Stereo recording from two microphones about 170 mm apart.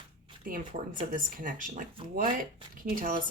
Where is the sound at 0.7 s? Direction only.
50° right (ahead or behind).